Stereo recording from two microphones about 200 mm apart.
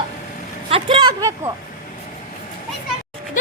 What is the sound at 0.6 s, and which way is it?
Speech, 25° right (ahead or behind).